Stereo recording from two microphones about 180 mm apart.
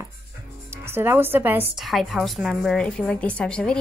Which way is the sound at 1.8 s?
Centre (ahead or behind).